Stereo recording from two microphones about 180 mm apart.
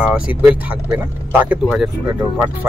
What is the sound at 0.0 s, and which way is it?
Speech, 10° right (ahead or behind).